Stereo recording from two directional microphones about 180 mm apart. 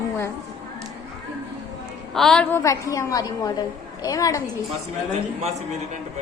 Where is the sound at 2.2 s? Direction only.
5° left (ahead or behind).